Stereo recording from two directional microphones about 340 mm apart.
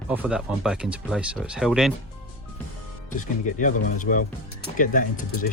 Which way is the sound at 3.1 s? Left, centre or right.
Left.